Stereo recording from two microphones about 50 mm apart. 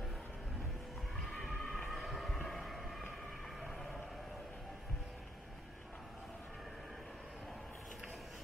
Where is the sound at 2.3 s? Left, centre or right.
Centre.